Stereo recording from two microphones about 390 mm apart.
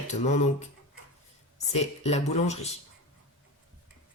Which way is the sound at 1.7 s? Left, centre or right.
Centre.